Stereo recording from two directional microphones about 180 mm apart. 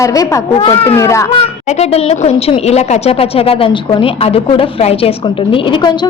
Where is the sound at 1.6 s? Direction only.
35° left (ahead or behind).